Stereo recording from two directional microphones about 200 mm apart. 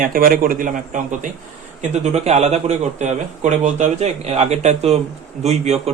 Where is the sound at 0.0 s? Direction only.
45° right (ahead or behind).